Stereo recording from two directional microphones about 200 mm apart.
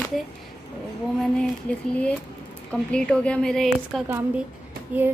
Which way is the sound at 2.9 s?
5° left (ahead or behind).